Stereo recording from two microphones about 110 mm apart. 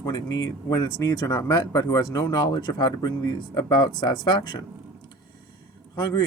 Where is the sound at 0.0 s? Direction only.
35° left (ahead or behind).